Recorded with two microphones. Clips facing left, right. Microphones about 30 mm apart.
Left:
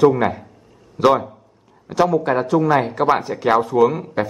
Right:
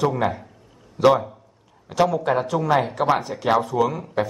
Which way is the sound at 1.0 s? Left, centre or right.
Left.